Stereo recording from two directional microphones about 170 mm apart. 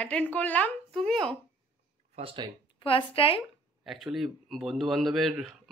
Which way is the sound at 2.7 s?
30° left (ahead or behind).